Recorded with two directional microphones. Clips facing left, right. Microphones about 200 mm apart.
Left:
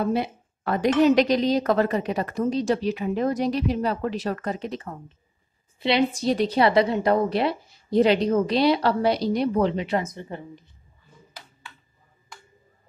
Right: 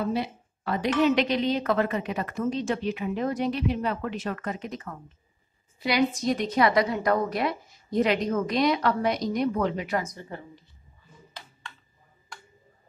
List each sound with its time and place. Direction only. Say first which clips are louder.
0.0 s a woman's voice: left 4 dB; 55° left (ahead or behind); by 10.6 s 20° left (ahead or behind)